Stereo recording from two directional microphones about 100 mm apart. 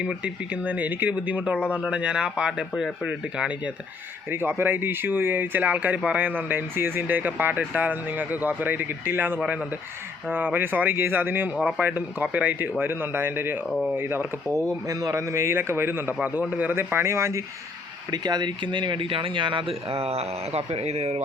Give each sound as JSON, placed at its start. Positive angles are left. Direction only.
{"t": 0.0, "sound": "speech", "side_deg": -10}
{"t": 4.3, "sound": "speech", "side_deg": -20}
{"t": 9.4, "sound": "speech", "side_deg": -5}
{"t": 10.2, "sound": "speech", "side_deg": -20}
{"t": 13.7, "sound": "speech", "side_deg": 0}
{"t": 13.9, "sound": "speech", "side_deg": -20}
{"t": 14.5, "sound": "speech", "side_deg": -30}
{"t": 18.1, "sound": "speech", "side_deg": -45}